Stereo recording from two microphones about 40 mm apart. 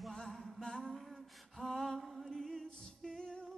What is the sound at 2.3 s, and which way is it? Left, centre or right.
Music, centre.